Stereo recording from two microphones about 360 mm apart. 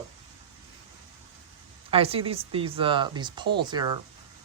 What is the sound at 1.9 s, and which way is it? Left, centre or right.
Speech, centre.